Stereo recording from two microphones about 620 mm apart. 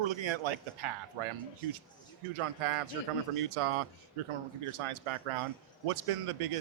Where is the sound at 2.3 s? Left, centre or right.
Right.